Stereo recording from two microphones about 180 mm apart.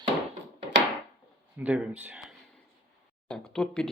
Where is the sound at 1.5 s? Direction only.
5° right (ahead or behind).